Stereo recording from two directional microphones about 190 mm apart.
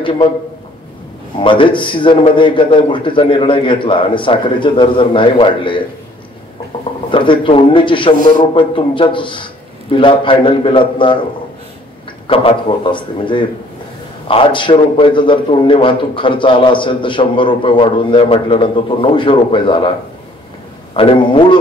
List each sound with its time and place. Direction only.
1.4 s a man's voice: 25° left (ahead or behind)
7.1 s a man's voice: 25° left (ahead or behind)
12.3 s a man's voice: 25° left (ahead or behind)
20.9 s a man's voice: 30° left (ahead or behind)